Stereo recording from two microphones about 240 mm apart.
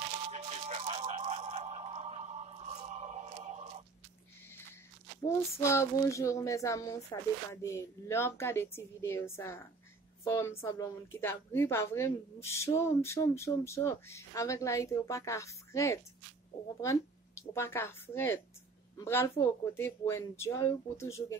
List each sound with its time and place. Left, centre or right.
0.3 s music: right
5.2 s speech: centre